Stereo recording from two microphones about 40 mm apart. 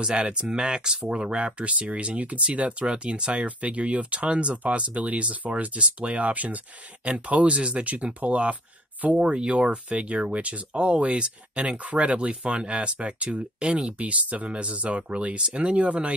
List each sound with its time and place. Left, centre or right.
0.0 s speech: right
7.1 s speech: right
9.2 s speech: right